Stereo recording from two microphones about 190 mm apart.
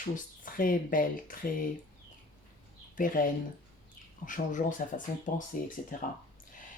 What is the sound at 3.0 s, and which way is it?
Speech, 45° left (ahead or behind).